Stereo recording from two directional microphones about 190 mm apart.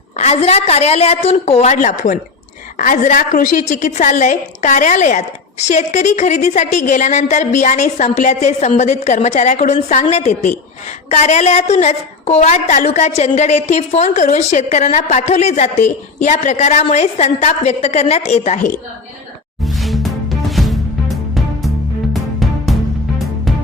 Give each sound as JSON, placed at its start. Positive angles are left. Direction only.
{"t": 0.2, "sound": "a woman's voice", "side_deg": 35}
{"t": 19.6, "sound": "music", "side_deg": 0}